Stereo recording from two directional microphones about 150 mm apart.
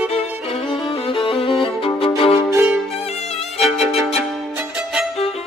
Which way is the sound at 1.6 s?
35° left (ahead or behind).